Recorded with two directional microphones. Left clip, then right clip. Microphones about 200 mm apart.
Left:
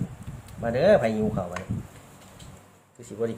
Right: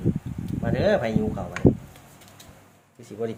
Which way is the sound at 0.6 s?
Centre (ahead or behind).